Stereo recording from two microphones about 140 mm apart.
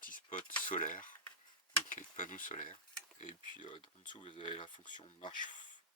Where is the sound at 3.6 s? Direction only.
35° left (ahead or behind).